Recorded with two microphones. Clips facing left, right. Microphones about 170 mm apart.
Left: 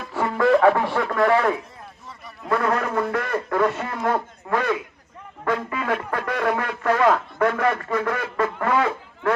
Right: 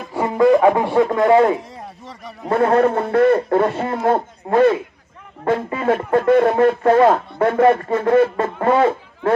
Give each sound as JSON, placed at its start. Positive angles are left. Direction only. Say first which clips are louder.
{"t": 0.0, "sound": "speech", "louder": "right 6 dB", "side_deg": -20}
{"t": 1.7, "sound": "a sound", "louder": "right 7 dB", "side_deg": -75}
{"t": 2.4, "sound": "a man's voice", "louder": "right 8 dB", "side_deg": -30}